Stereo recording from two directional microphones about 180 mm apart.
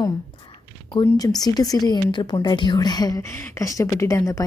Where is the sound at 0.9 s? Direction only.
20° left (ahead or behind).